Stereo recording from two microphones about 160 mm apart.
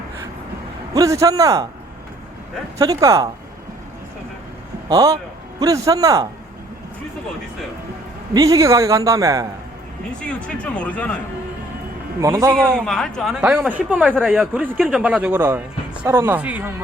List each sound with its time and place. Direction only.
0.9 s a man's voice: 20° right (ahead or behind)
2.7 s a man's voice: 20° right (ahead or behind)
4.9 s a man's voice: 20° right (ahead or behind)
8.3 s a man's voice: 20° right (ahead or behind)
10.2 s speech: 5° left (ahead or behind)
12.2 s a man's voice: 20° right (ahead or behind)
12.5 s speech: 5° left (ahead or behind)